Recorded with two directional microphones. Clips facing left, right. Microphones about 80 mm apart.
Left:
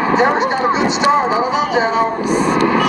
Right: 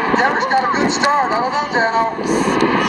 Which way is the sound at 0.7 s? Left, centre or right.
Centre.